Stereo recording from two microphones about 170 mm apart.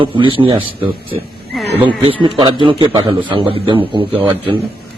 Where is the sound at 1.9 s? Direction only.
30° right (ahead or behind).